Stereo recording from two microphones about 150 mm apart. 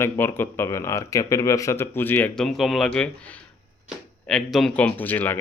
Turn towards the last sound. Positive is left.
turn(degrees=10)  # may be behind; listen again after turning